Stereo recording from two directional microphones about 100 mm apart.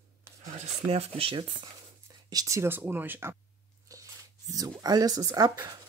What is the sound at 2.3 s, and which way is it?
Speech, 35° right (ahead or behind).